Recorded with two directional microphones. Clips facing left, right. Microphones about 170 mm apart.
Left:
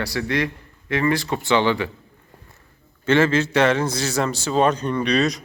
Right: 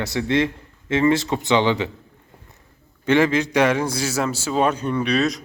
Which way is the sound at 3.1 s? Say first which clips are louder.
Even; 15° right (ahead or behind).